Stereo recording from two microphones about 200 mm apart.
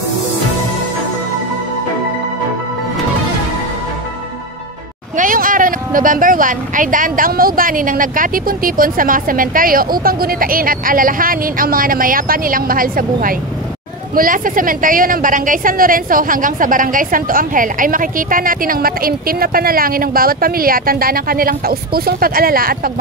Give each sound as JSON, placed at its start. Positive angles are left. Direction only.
{"t": 5.1, "sound": "a woman's voice", "side_deg": -40}